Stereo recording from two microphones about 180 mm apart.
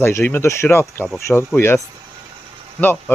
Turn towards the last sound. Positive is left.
turn(degrees=10)  # may be behind; listen again after turning